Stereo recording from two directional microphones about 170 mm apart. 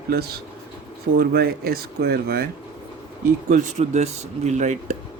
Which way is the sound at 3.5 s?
40° right (ahead or behind).